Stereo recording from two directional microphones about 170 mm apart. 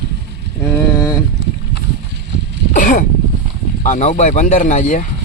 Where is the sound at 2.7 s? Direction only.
50° left (ahead or behind).